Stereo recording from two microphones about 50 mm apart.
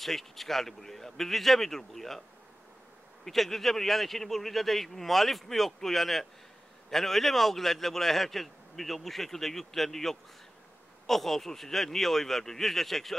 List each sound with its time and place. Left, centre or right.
0.0 s a man's voice: centre
3.3 s a man's voice: centre